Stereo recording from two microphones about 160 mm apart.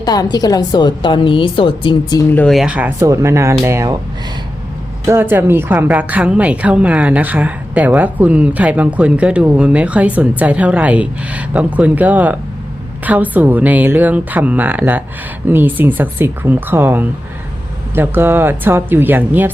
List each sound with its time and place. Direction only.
0.0 s a woman's voice: 25° left (ahead or behind)
2.3 s a woman's voice: 5° left (ahead or behind); by 3.9 s 20° right (ahead or behind)
5.0 s a woman's voice: 15° right (ahead or behind)